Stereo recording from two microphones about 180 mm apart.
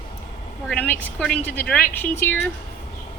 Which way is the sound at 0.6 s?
10° left (ahead or behind).